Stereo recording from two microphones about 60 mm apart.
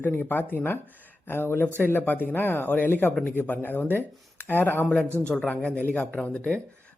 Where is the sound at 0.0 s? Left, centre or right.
Left.